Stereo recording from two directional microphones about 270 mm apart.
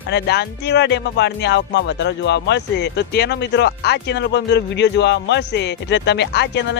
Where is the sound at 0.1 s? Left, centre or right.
Left.